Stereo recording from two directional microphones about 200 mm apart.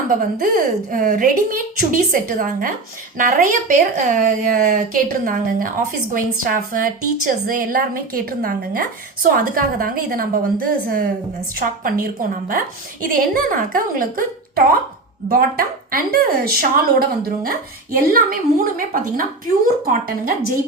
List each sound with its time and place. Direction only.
0.2 s a woman's voice: 45° right (ahead or behind)